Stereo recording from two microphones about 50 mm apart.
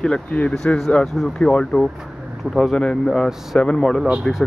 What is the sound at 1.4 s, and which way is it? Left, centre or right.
Speech, centre.